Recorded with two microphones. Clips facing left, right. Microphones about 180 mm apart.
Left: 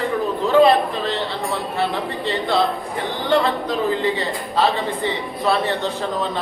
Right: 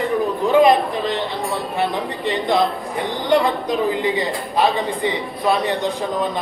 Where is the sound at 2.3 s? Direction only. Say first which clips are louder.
Right 2 dB; 15° right (ahead or behind).